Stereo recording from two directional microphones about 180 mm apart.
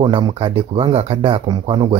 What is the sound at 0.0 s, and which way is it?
Speech, 30° right (ahead or behind).